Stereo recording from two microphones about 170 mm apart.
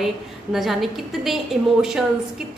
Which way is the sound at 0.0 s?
Centre (ahead or behind).